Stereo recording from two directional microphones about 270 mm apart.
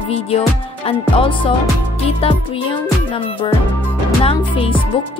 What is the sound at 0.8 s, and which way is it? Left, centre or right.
Music, centre.